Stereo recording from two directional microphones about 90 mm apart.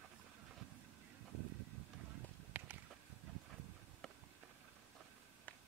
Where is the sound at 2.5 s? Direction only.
15° right (ahead or behind).